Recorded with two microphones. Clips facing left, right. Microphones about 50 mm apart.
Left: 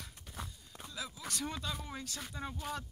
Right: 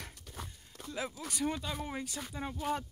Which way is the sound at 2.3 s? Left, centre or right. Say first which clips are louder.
Right 3 dB; centre.